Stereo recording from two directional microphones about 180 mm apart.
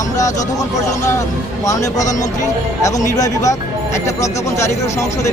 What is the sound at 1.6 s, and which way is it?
A man's voice, 20° left (ahead or behind).